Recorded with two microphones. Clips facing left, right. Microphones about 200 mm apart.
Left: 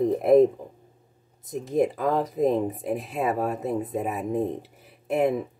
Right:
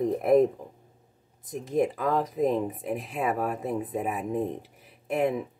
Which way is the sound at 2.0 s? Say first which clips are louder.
Left 2 dB; 30° left (ahead or behind).